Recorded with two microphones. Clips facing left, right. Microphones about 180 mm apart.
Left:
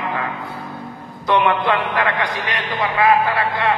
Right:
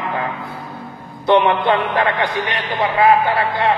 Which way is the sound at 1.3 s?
25° right (ahead or behind).